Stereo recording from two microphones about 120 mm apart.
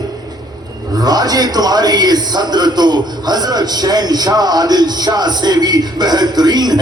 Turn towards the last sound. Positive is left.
turn(degrees=-35)  # may be behind; listen again after turning